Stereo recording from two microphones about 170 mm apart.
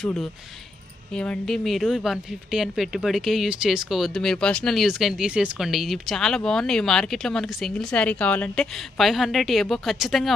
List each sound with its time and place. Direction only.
1.1 s a woman's voice: 5° left (ahead or behind)